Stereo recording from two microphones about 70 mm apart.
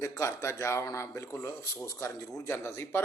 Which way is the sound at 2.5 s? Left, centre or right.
Left.